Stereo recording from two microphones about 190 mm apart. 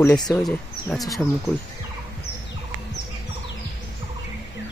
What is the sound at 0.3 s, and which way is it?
Speech, centre (ahead or behind).